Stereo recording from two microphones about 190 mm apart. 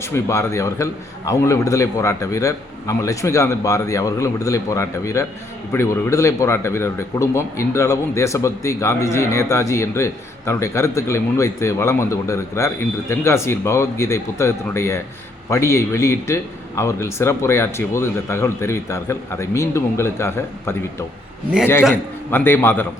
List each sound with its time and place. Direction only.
0.0 s a man's voice: 15° left (ahead or behind)
22.3 s a man's voice: 10° left (ahead or behind)